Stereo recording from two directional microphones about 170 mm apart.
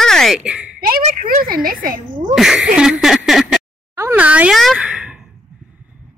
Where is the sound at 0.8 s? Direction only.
50° right (ahead or behind).